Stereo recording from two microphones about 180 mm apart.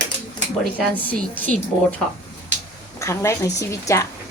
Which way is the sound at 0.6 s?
5° left (ahead or behind).